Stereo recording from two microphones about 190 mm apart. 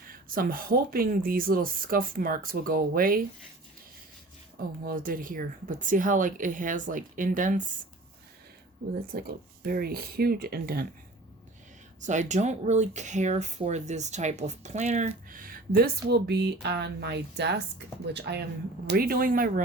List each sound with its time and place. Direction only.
0.1 s speech: 50° right (ahead or behind)
4.8 s speech: 50° right (ahead or behind)
9.1 s speech: 55° right (ahead or behind)
11.9 s speech: 40° right (ahead or behind)